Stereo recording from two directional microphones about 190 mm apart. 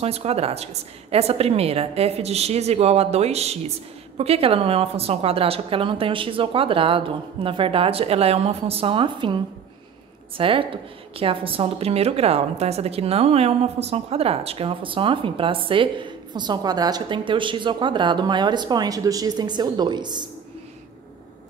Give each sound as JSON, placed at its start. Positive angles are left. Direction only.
{"t": 0.0, "sound": "a woman's voice", "side_deg": -30}